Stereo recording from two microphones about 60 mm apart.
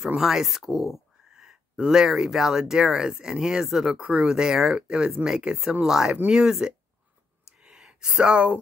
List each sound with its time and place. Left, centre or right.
0.0 s speech: centre
7.5 s gasp: centre